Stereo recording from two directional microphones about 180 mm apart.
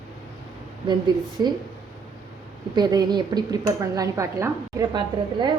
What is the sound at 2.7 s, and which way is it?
Speech, 20° right (ahead or behind).